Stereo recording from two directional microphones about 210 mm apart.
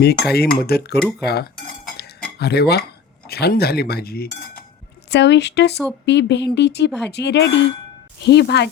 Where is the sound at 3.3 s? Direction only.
50° left (ahead or behind).